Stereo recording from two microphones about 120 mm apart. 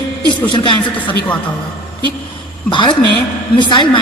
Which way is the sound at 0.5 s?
40° left (ahead or behind).